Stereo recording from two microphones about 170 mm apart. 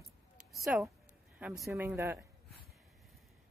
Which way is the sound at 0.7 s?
10° right (ahead or behind).